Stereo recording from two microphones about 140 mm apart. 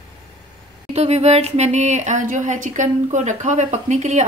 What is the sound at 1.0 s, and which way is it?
Speech, 50° right (ahead or behind).